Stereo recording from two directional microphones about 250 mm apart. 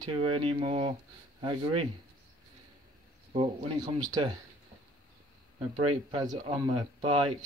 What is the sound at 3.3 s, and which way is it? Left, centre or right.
Speech, centre.